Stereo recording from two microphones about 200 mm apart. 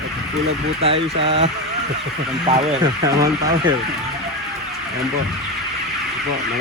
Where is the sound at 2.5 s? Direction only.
35° right (ahead or behind).